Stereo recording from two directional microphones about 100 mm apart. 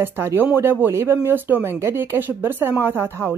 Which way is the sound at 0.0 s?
25° right (ahead or behind).